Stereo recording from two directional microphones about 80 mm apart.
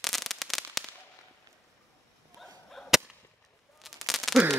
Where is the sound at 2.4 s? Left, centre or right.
Centre.